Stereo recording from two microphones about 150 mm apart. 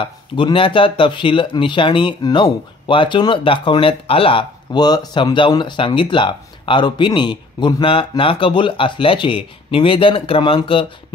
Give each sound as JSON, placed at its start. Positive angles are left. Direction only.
{"t": 0.0, "sound": "speech", "side_deg": 35}